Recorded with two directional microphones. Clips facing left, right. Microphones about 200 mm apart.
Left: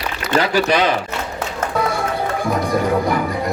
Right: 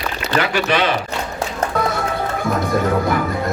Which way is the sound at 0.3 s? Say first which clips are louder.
Left 2 dB; 35° left (ahead or behind).